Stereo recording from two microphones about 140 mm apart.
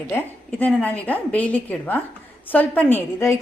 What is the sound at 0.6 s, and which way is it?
A woman's voice, 10° left (ahead or behind).